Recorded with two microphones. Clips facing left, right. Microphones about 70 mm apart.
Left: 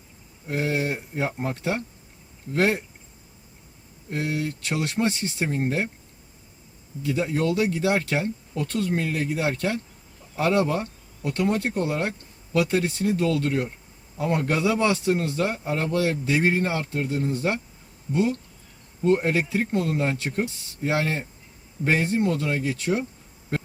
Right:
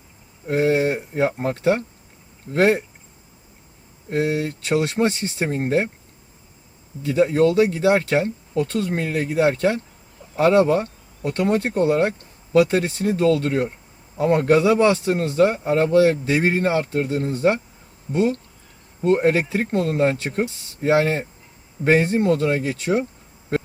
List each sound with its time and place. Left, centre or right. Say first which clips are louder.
0.4 s speech: right 7 dB; right
4.1 s speech: right 6 dB; right
7.0 s speech: right 7 dB; right